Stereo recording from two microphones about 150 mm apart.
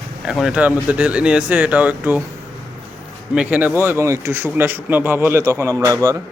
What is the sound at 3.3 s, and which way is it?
Speech, 10° right (ahead or behind).